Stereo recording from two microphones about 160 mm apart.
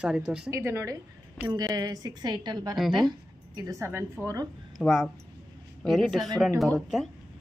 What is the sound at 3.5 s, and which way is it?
Speech, 20° right (ahead or behind).